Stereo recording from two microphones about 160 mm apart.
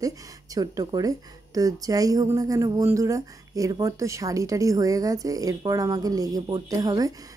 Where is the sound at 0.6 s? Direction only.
25° right (ahead or behind).